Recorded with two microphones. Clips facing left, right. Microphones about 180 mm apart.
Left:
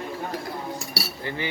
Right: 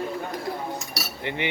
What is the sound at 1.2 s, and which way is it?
Speech, 20° right (ahead or behind).